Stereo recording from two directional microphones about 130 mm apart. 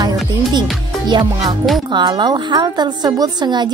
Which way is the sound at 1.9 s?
35° right (ahead or behind).